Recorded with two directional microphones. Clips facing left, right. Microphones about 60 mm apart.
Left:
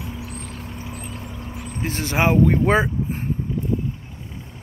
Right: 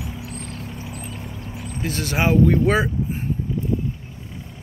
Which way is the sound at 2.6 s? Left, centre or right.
Left.